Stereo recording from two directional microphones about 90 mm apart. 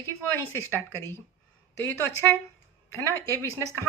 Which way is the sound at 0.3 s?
30° left (ahead or behind).